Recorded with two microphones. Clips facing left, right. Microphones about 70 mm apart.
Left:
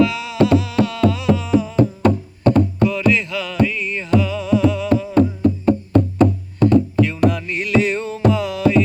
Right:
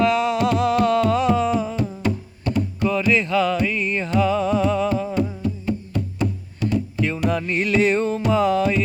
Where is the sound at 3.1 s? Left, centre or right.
Right.